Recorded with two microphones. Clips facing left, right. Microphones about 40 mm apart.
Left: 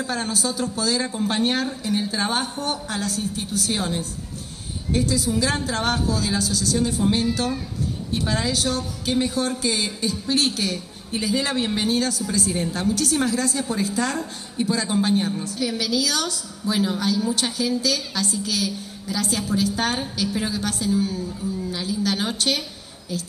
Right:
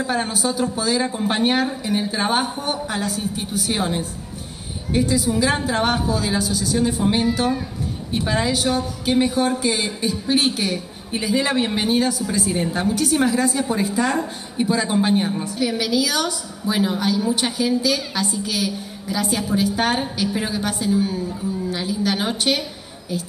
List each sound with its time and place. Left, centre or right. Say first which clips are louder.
0.0 s a woman's voice: right 3 dB; centre